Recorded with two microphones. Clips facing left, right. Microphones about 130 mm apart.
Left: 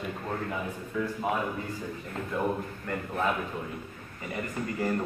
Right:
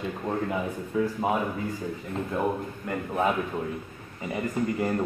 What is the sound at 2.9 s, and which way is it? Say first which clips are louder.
Speech: right 3 dB; 15° right (ahead or behind).